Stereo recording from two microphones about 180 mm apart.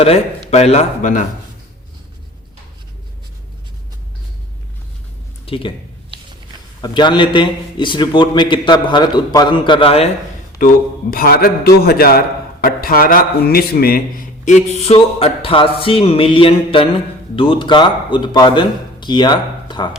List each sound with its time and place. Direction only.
0.0 s a man's voice: 35° left (ahead or behind)
5.5 s speech: 30° left (ahead or behind)
6.8 s a man's voice: 25° left (ahead or behind)
11.1 s a man's voice: 55° left (ahead or behind); by 19.9 s 25° left (ahead or behind)